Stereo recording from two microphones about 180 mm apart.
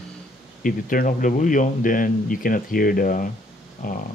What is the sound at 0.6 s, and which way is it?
Speech, 50° left (ahead or behind).